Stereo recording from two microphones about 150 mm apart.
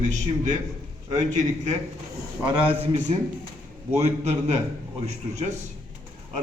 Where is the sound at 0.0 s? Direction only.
55° right (ahead or behind).